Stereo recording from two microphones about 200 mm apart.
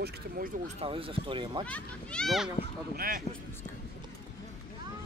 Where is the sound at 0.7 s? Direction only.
25° right (ahead or behind).